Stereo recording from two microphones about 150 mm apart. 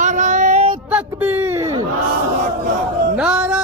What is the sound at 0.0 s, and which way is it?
Female singing, 55° right (ahead or behind).